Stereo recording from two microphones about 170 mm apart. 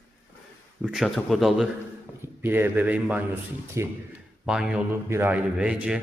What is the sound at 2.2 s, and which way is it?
A man's voice, 10° right (ahead or behind).